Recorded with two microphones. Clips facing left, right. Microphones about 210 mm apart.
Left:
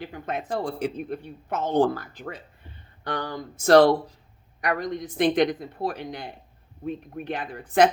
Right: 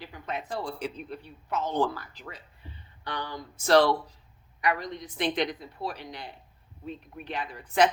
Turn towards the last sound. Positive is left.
turn(degrees=50)  # may be behind; listen again after turning